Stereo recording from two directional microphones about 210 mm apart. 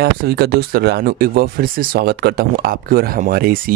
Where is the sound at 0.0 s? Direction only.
50° right (ahead or behind).